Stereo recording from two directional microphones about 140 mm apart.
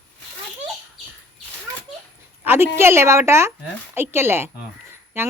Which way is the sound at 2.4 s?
15° right (ahead or behind).